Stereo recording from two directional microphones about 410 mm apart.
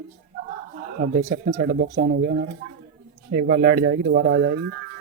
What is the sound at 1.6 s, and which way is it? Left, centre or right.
Speech, right.